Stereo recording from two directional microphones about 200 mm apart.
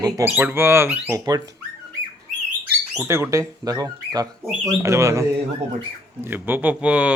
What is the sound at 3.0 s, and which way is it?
Speech, 15° right (ahead or behind).